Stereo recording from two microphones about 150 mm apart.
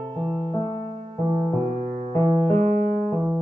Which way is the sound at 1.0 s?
40° right (ahead or behind).